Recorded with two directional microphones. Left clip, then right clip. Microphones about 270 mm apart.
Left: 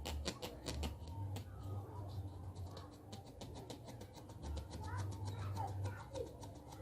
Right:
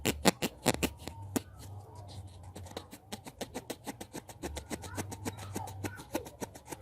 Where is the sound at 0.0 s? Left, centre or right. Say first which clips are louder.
Right 16 dB; right.